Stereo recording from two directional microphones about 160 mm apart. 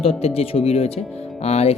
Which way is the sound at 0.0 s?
40° left (ahead or behind).